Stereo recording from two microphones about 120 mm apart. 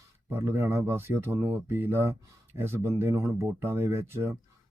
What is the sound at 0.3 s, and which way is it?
Speech, 25° right (ahead or behind).